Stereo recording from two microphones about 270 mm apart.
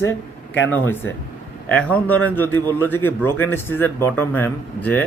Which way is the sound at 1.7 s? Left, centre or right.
Centre.